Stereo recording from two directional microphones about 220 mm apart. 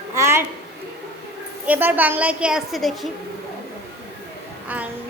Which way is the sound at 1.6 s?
10° right (ahead or behind).